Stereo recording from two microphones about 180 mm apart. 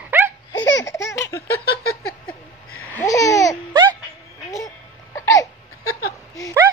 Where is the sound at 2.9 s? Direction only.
20° left (ahead or behind).